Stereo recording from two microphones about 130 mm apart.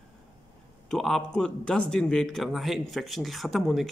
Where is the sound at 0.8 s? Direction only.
Centre (ahead or behind).